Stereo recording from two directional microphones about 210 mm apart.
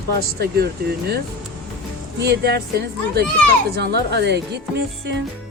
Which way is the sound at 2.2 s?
50° right (ahead or behind).